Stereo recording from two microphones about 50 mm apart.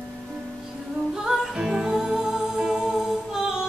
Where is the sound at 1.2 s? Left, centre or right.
Centre.